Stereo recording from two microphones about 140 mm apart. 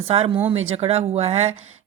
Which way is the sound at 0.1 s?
40° right (ahead or behind).